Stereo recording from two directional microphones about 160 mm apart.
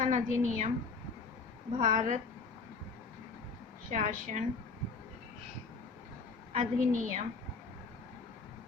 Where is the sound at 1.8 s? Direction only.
50° right (ahead or behind).